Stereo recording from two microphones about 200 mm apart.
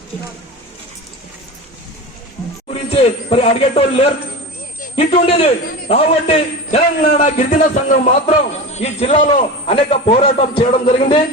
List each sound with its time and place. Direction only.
2.6 s a man's voice: 30° left (ahead or behind)